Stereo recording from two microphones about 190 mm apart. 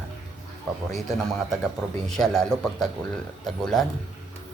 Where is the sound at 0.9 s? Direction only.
Centre (ahead or behind).